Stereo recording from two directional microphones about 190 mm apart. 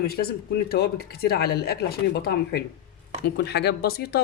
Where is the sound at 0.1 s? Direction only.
55° left (ahead or behind).